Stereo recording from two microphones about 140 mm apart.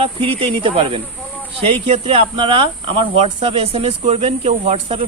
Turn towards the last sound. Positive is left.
turn(degrees=-45)  # may be behind; listen again after turning